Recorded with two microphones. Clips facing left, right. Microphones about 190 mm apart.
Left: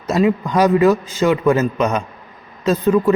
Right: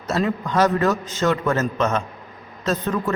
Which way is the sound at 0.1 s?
10° left (ahead or behind).